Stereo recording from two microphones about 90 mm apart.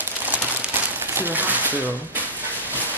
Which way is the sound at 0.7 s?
25° right (ahead or behind).